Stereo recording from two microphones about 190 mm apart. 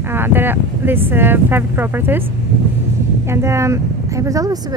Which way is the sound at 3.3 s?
15° right (ahead or behind).